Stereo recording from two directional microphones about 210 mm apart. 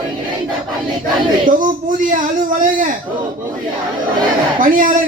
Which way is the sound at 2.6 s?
40° right (ahead or behind).